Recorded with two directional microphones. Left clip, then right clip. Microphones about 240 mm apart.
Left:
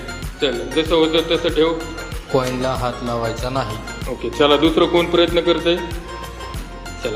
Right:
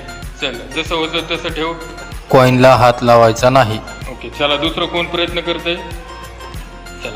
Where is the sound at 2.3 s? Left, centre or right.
Right.